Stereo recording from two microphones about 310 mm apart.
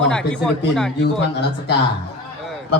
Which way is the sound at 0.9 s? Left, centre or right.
Left.